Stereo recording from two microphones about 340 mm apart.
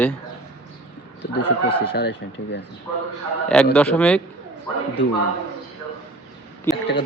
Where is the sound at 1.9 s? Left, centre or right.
Left.